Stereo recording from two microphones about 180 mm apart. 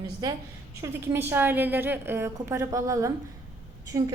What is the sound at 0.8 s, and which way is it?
A woman's voice, 10° right (ahead or behind).